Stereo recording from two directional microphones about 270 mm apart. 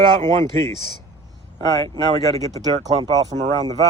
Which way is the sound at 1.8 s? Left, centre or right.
Centre.